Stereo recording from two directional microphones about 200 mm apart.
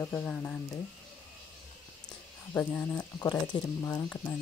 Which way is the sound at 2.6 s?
5° left (ahead or behind).